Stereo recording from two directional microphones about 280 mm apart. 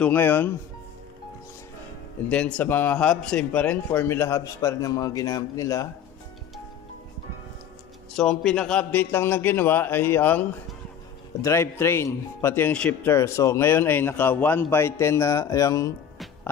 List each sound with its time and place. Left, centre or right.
0.0 s a man's voice: centre
2.2 s a man's voice: centre
8.2 s a man's voice: centre
11.4 s a man's voice: centre